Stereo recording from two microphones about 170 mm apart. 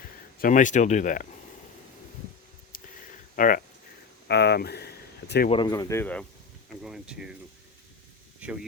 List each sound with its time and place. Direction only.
0.4 s speech: 50° left (ahead or behind)
2.7 s a sound: 55° left (ahead or behind)
3.3 s speech: 50° left (ahead or behind)
4.3 s speech: 75° left (ahead or behind)
5.5 s speech: 25° left (ahead or behind); by 6.2 s 10° left (ahead or behind)
6.8 s speech: 5° right (ahead or behind)
8.4 s speech: 5° right (ahead or behind)